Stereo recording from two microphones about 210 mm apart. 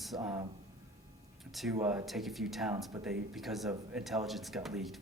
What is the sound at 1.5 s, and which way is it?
Speech, centre (ahead or behind).